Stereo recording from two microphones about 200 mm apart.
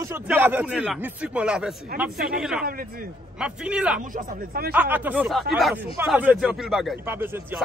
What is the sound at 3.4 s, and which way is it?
Speech, 5° right (ahead or behind).